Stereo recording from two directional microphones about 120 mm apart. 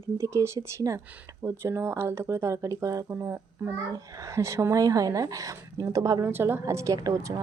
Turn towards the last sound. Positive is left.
turn(degrees=-30)  # may be behind; listen again after turning